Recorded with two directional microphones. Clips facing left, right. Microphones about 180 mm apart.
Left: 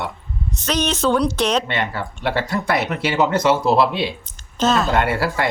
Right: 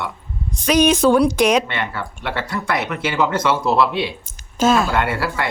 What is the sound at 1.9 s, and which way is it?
Speech, 35° left (ahead or behind).